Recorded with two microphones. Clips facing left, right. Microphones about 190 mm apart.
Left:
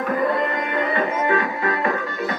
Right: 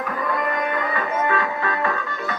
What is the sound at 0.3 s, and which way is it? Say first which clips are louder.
Music: left 1 dB; 30° left (ahead or behind).